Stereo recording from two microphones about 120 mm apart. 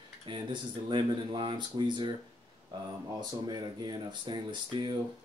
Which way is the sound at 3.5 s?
35° right (ahead or behind).